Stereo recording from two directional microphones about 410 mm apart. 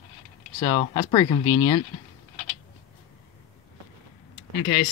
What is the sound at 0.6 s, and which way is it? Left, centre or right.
Speech, centre.